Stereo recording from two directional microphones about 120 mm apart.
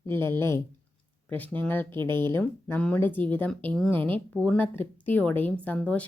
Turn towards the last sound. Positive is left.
turn(degrees=10)  # may be behind; listen again after turning